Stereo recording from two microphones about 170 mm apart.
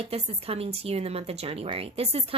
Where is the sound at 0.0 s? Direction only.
35° right (ahead or behind).